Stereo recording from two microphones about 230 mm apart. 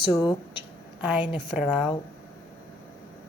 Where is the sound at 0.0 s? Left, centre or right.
Centre.